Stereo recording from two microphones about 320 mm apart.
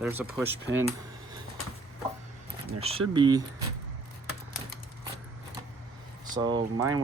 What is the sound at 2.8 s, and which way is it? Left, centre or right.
Speech, centre.